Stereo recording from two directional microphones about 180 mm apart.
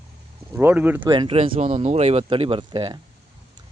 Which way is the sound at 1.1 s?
30° right (ahead or behind).